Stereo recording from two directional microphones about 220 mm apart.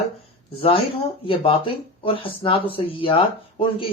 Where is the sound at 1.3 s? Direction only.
25° left (ahead or behind).